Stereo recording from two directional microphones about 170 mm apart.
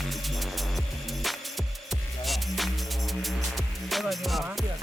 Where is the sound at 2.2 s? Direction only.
Centre (ahead or behind).